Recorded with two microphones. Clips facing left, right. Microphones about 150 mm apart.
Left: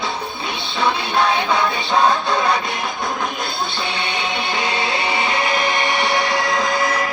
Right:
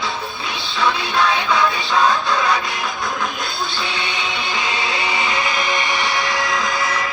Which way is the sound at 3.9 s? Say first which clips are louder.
Left 2 dB; 55° left (ahead or behind).